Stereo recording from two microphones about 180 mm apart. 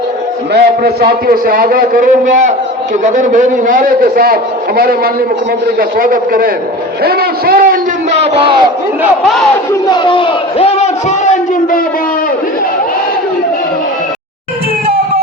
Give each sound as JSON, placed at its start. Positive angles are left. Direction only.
{"t": 0.5, "sound": "a man's voice", "side_deg": -60}
{"t": 8.2, "sound": "battle cry", "side_deg": -30}
{"t": 9.8, "sound": "a man's voice", "side_deg": 25}